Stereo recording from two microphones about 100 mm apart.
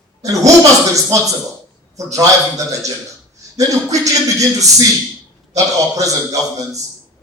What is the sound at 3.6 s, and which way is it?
A man's voice, 35° right (ahead or behind).